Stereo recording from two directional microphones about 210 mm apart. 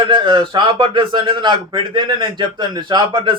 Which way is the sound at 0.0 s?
25° right (ahead or behind).